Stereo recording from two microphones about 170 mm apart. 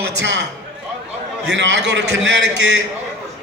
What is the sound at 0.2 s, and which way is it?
Speech, 90° right.